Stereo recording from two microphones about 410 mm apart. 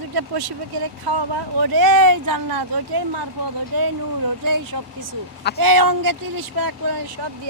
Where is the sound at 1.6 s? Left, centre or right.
Right.